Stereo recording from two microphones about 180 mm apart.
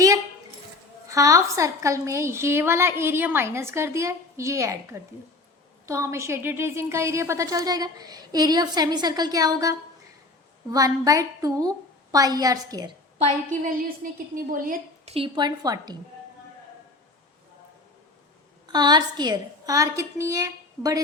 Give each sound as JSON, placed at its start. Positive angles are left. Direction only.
{"t": 1.0, "sound": "a woman's voice", "side_deg": -15}
{"t": 13.5, "sound": "a woman's voice", "side_deg": -45}
{"t": 15.0, "sound": "a woman's voice", "side_deg": -30}
{"t": 18.7, "sound": "a woman's voice", "side_deg": -25}